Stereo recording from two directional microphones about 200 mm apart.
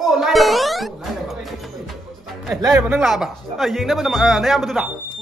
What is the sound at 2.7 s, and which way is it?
Speech, 10° right (ahead or behind).